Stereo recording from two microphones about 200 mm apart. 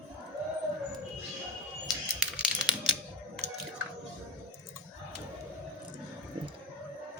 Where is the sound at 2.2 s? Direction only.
5° right (ahead or behind).